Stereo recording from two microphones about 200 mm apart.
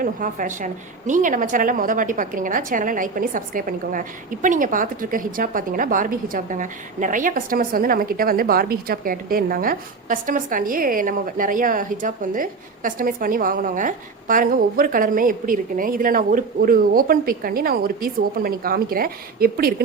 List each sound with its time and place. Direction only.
0.0 s a woman's voice: 40° right (ahead or behind)